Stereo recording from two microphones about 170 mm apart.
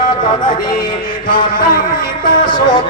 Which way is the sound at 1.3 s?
55° left (ahead or behind).